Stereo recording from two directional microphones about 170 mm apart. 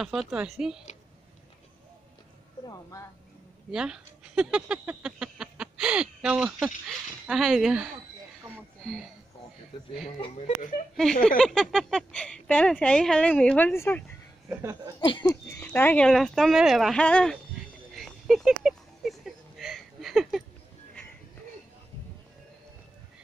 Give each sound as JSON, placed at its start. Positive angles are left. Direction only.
{"t": 0.0, "sound": "speech", "side_deg": 0}
{"t": 2.6, "sound": "a sound", "side_deg": 20}
{"t": 3.7, "sound": "speech", "side_deg": -5}
{"t": 10.0, "sound": "speech", "side_deg": 40}
{"t": 11.2, "sound": "speech", "side_deg": 5}
{"t": 14.5, "sound": "speech", "side_deg": -15}
{"t": 15.2, "sound": "speech", "side_deg": 10}
{"t": 17.9, "sound": "a sound", "side_deg": 0}